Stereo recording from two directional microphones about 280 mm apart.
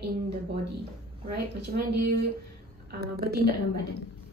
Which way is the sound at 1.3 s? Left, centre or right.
Right.